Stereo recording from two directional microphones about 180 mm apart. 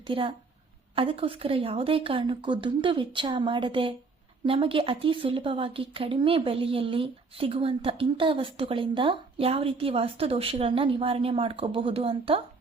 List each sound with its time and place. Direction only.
0.1 s a woman's voice: 30° right (ahead or behind)